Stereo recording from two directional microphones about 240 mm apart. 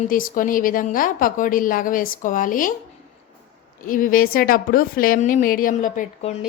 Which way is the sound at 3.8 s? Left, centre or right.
Left.